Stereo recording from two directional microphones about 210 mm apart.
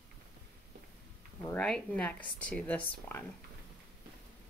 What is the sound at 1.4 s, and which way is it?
Speech, 5° left (ahead or behind).